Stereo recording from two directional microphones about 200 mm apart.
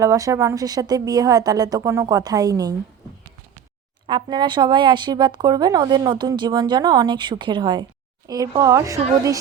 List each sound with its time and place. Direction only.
0.0 s a woman's voice: 15° right (ahead or behind)
4.0 s a woman's voice: 20° right (ahead or behind)